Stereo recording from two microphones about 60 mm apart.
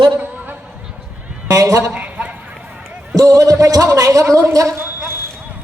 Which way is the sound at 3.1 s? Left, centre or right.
Right.